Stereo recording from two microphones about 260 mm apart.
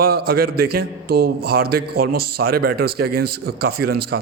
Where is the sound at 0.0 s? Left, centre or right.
Right.